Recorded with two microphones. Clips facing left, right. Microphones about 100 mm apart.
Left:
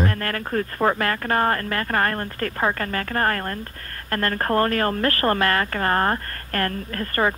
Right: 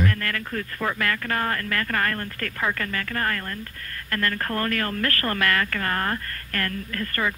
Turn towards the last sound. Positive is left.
turn(degrees=35)  # may be behind; listen again after turning